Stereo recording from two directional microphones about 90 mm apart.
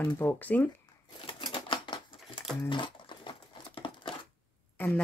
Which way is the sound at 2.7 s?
65° left (ahead or behind).